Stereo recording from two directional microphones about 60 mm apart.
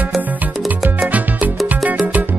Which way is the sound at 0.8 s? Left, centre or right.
Right.